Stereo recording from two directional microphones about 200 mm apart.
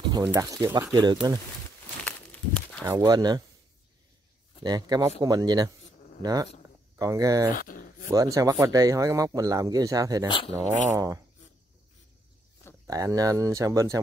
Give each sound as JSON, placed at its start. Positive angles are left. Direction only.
{"t": 0.2, "sound": "speech", "side_deg": -15}
{"t": 2.0, "sound": "a sound", "side_deg": 5}
{"t": 2.8, "sound": "speech", "side_deg": -20}
{"t": 4.6, "sound": "speech", "side_deg": -20}
{"t": 7.5, "sound": "a sound", "side_deg": 45}
{"t": 8.1, "sound": "speech", "side_deg": -15}
{"t": 10.2, "sound": "speech", "side_deg": 25}
{"t": 10.7, "sound": "speech", "side_deg": -35}
{"t": 12.8, "sound": "speech", "side_deg": -15}